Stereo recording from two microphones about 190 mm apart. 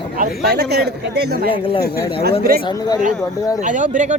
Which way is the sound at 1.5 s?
25° left (ahead or behind).